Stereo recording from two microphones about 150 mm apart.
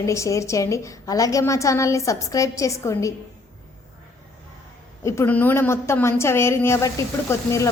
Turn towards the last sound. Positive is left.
turn(degrees=20)  # may be behind; listen again after turning